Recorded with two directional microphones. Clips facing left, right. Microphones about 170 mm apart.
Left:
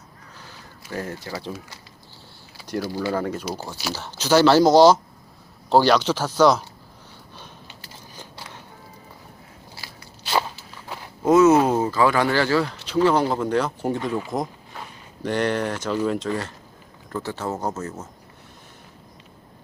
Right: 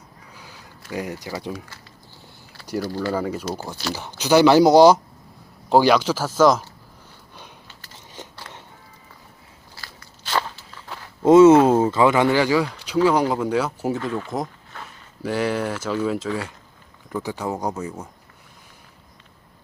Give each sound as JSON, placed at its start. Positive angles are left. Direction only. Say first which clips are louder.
{"t": 0.9, "sound": "speech", "louder": "right 2 dB", "side_deg": -15}
{"t": 2.8, "sound": "speech", "louder": "even", "side_deg": 10}
{"t": 3.2, "sound": "speech", "louder": "right 1 dB", "side_deg": -10}
{"t": 7.9, "sound": "biting", "louder": "right 4 dB", "side_deg": -20}
{"t": 9.7, "sound": "crunch", "louder": "right 1 dB", "side_deg": 15}
{"t": 10.8, "sound": "a sound", "louder": "left 2 dB", "side_deg": 15}
{"t": 11.2, "sound": "speech", "louder": "right 4 dB", "side_deg": -25}
{"t": 14.4, "sound": "a sound", "louder": "left 1 dB", "side_deg": 15}
{"t": 15.2, "sound": "speech", "louder": "even", "side_deg": -5}